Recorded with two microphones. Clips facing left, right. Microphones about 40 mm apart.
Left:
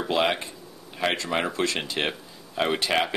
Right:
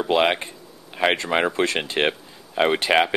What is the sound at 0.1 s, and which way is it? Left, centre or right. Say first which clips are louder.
Speech: right 4 dB; right.